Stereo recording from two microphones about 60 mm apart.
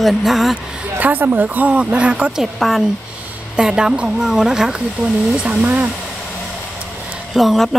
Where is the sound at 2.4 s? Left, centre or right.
Centre.